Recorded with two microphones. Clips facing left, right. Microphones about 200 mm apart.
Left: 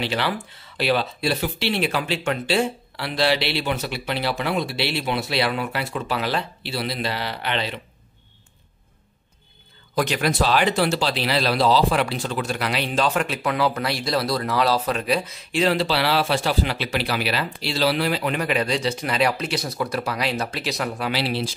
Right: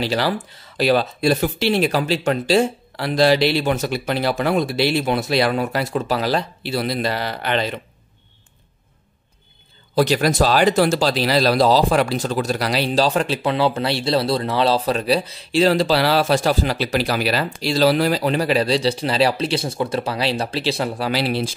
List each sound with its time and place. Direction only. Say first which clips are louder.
0.0 s speech: right 4 dB; 40° right (ahead or behind)
9.9 s speech: right 5 dB; 35° right (ahead or behind)
21.1 s speech: right 4 dB; 45° right (ahead or behind)